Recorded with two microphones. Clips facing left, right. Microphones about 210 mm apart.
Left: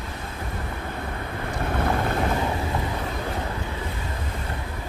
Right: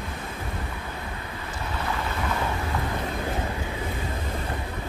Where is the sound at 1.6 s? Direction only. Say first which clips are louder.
Left 6 dB; 55° left (ahead or behind).